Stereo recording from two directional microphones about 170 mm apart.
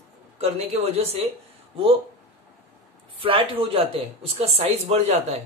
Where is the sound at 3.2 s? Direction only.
30° right (ahead or behind).